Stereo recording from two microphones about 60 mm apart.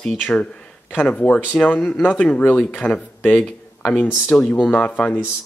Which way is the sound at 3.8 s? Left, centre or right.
Left.